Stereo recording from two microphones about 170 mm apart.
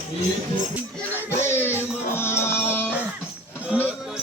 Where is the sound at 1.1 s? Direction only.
15° left (ahead or behind).